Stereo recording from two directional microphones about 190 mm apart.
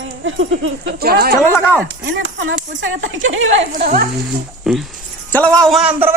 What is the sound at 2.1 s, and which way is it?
Speech, 75° right (ahead or behind).